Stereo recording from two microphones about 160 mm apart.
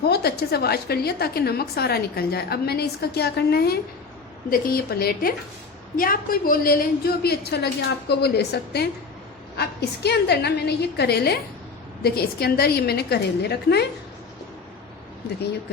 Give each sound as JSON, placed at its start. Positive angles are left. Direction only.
{"t": 0.0, "sound": "a woman's voice", "side_deg": 80}
{"t": 4.4, "sound": "a woman's voice", "side_deg": 65}
{"t": 6.0, "sound": "a woman's voice", "side_deg": 60}
{"t": 12.0, "sound": "a woman's voice", "side_deg": 75}